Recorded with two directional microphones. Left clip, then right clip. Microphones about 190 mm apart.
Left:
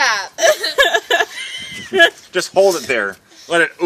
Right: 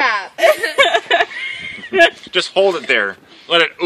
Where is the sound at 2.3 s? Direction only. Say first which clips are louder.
Left 1 dB; 60° left (ahead or behind).